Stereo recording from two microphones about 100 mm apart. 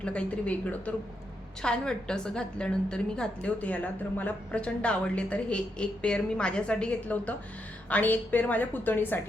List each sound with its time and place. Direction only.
0.0 s a woman's voice: 10° left (ahead or behind)